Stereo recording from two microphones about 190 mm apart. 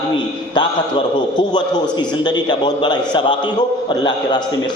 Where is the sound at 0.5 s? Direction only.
25° left (ahead or behind).